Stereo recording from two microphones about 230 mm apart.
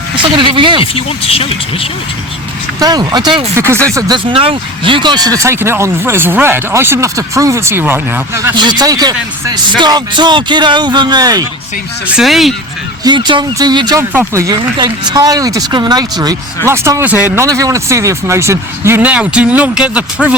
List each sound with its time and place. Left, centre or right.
0.2 s speech: right
0.8 s speech: left
2.8 s speech: centre
12.0 s speech: centre
13.1 s speech: centre